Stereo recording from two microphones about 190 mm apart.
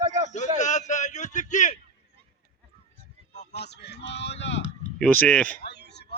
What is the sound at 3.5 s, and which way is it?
Speech, 60° left (ahead or behind).